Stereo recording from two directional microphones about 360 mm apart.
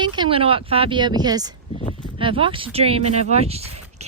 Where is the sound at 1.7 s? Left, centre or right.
Centre.